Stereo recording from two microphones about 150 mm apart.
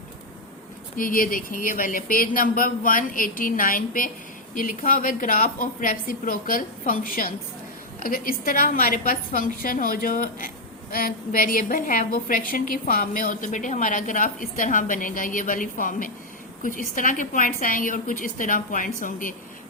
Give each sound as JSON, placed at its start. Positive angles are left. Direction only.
{"t": 0.9, "sound": "a woman's voice", "side_deg": 70}